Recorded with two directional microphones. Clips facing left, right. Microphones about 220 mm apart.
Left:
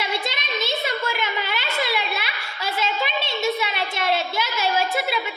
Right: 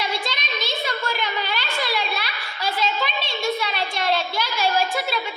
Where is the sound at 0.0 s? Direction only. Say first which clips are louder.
Even; 25° left (ahead or behind).